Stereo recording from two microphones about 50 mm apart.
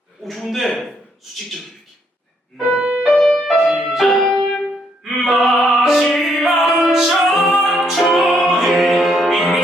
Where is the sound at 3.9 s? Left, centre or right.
Centre.